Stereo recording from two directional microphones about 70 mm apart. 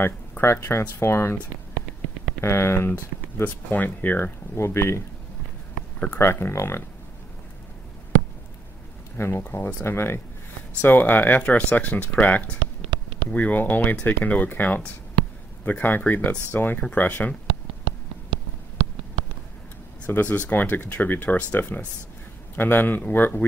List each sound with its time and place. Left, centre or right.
0.0 s speech: left
2.4 s speech: left
3.4 s speech: left
4.6 s speech: left
5.8 s a sound: centre
6.1 s speech: left
9.1 s speech: left
20.1 s speech: left